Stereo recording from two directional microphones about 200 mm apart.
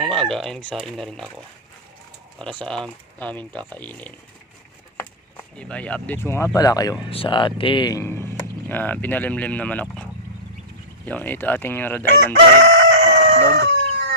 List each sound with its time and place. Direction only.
0.0 s speech: centre (ahead or behind)
2.4 s speech: 5° left (ahead or behind)
5.4 s speech: 5° left (ahead or behind)
11.0 s speech: 10° left (ahead or behind)
12.6 s crowing: 65° right (ahead or behind)
13.1 s fowl: 55° right (ahead or behind)